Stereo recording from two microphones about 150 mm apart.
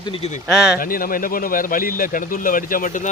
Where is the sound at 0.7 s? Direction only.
70° left (ahead or behind).